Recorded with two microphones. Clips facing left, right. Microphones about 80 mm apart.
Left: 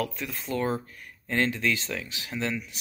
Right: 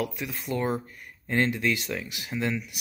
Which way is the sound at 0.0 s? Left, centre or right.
Centre.